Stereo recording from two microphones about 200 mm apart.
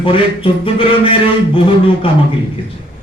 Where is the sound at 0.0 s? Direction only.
25° left (ahead or behind).